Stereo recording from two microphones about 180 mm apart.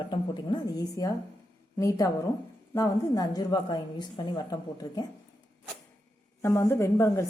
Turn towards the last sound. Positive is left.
turn(degrees=15)  # may be behind; listen again after turning